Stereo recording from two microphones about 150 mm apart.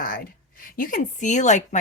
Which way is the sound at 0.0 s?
75° left (ahead or behind).